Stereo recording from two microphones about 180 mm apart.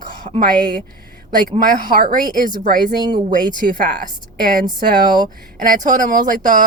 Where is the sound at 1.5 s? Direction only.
50° right (ahead or behind).